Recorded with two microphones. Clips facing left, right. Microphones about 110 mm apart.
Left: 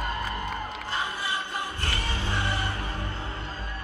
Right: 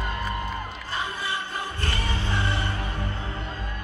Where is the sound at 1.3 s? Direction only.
15° left (ahead or behind).